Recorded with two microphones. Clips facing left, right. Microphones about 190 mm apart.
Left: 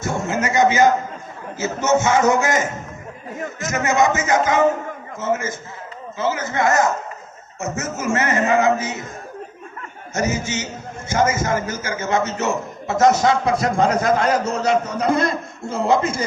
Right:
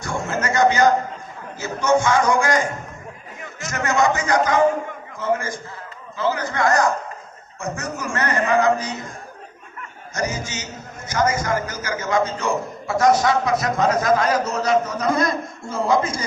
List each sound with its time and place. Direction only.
0.3 s a man's voice: 20° left (ahead or behind)
10.2 s a man's voice: 25° left (ahead or behind)